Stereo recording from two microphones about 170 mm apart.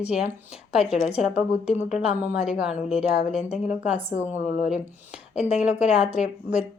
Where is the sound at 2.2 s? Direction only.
10° right (ahead or behind).